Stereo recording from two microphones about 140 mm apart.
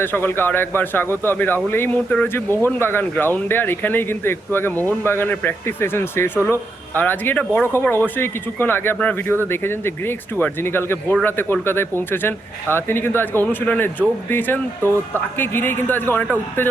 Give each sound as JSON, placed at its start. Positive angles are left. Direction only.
{"t": 0.0, "sound": "speech", "side_deg": 15}